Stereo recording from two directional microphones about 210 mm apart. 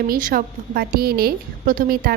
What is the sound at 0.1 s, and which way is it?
A woman's voice, 40° right (ahead or behind).